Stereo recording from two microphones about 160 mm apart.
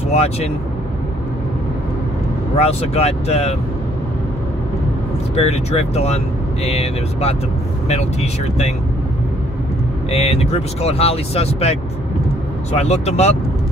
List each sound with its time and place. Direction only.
0.1 s speech: 40° left (ahead or behind)
2.5 s speech: 40° left (ahead or behind)
5.3 s speech: 40° left (ahead or behind)
10.1 s speech: 40° left (ahead or behind)